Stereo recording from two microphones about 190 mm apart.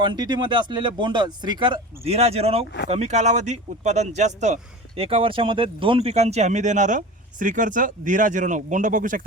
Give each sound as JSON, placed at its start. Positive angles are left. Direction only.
{"t": 0.0, "sound": "speech", "side_deg": -25}